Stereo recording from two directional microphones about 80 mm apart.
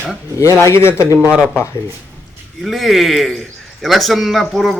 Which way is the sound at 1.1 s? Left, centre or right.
Centre.